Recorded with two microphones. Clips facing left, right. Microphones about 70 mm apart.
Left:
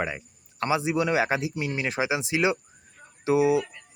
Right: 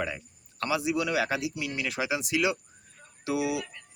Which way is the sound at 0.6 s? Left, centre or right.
Left.